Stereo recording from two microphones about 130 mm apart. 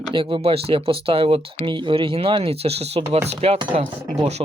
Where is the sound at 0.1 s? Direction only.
40° right (ahead or behind).